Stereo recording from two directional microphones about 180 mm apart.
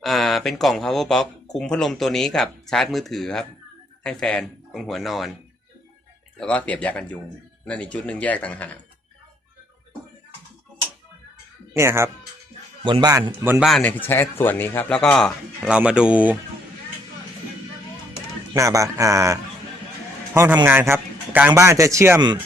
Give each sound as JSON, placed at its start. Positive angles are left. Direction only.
{"t": 0.0, "sound": "speech", "side_deg": 0}
{"t": 6.4, "sound": "speech", "side_deg": 5}
{"t": 11.7, "sound": "a man's voice", "side_deg": -15}
{"t": 12.8, "sound": "a man's voice", "side_deg": -25}
{"t": 13.7, "sound": "speech", "side_deg": 5}
{"t": 18.5, "sound": "a man's voice", "side_deg": -20}